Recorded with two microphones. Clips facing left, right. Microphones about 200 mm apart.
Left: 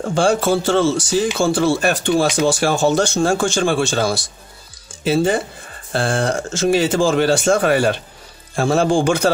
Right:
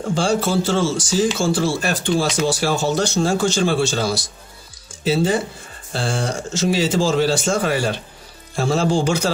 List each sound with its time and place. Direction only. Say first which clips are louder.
0.1 s speech: left 3 dB; 55° left (ahead or behind)